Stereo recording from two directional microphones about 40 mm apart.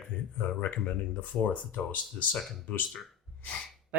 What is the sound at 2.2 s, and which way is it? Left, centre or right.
Speech, left.